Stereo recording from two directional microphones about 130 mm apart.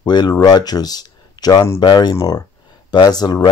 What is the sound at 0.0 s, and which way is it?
Speech, 35° left (ahead or behind).